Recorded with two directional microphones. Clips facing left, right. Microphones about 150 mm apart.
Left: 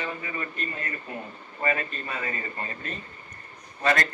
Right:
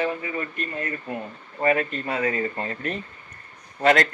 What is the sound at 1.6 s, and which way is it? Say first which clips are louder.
Speech: right 6 dB; 65° right (ahead or behind).